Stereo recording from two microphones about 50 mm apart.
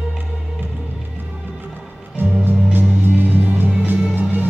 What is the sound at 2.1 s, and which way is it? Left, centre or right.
Music, right.